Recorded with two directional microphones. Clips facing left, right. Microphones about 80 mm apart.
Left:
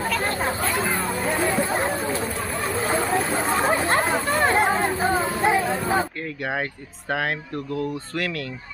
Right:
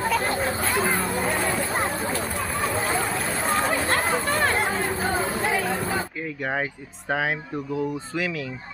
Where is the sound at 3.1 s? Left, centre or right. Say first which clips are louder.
Left 3 dB; left.